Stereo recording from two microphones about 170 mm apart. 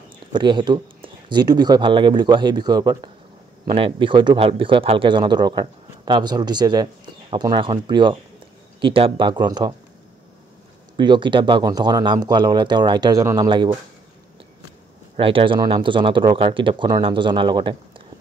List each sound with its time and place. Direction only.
0.3 s speech: 25° right (ahead or behind)
11.0 s speech: 25° right (ahead or behind)
15.1 s speech: 30° right (ahead or behind)